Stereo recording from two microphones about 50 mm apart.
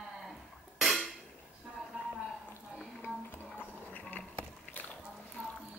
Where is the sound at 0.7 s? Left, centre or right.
Centre.